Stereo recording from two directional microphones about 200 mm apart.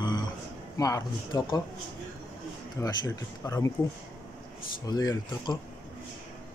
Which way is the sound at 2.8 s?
20° left (ahead or behind).